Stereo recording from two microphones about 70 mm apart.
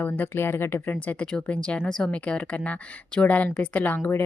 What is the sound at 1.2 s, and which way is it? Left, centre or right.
Speech, centre.